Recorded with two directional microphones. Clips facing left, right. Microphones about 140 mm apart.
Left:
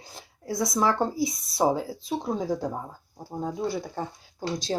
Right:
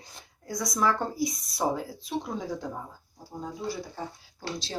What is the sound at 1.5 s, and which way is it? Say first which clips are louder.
Speech: left 6 dB; 25° left (ahead or behind).